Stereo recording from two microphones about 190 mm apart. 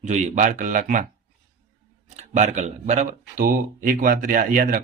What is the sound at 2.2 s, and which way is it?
Speech, 40° right (ahead or behind).